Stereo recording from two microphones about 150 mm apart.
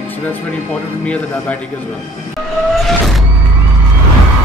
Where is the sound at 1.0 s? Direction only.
10° left (ahead or behind).